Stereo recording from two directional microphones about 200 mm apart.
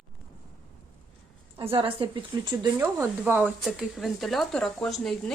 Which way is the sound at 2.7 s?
10° right (ahead or behind).